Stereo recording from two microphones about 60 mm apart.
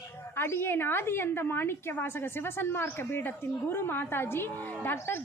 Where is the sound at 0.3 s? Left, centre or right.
Left.